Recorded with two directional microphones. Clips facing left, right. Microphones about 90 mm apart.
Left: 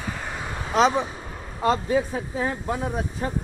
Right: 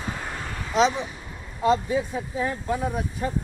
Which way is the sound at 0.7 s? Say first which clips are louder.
Left 2 dB; 45° left (ahead or behind).